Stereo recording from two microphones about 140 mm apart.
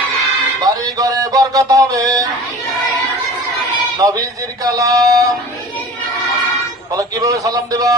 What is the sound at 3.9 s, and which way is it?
A man's voice, 25° right (ahead or behind).